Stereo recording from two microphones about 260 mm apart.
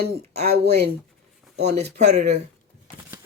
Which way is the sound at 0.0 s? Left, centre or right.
Right.